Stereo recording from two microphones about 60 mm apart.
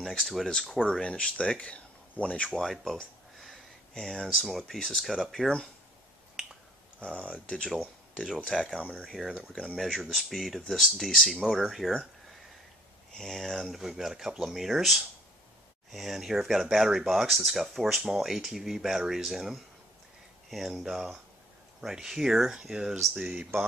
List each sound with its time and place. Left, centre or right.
0.0 s speech: centre
2.6 s a sound: centre
3.9 s speech: centre
7.0 s speech: centre
7.7 s speech: centre
13.1 s speech: centre